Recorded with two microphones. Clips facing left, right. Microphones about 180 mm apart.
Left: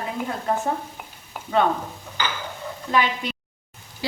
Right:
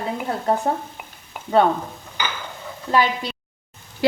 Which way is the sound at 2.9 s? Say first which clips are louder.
Right 3 dB; 35° right (ahead or behind).